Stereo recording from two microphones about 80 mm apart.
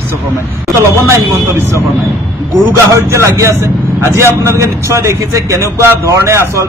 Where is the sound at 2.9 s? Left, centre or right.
Right.